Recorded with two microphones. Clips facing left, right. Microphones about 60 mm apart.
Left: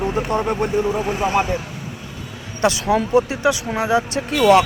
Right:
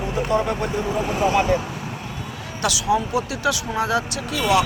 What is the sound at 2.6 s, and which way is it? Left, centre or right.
Speech, left.